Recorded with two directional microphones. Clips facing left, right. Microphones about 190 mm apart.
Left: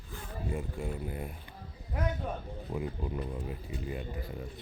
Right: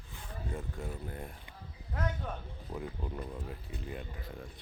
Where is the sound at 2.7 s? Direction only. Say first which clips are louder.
Left 4 dB; 5° left (ahead or behind).